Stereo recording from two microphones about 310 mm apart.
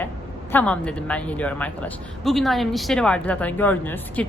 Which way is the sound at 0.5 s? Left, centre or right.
Centre.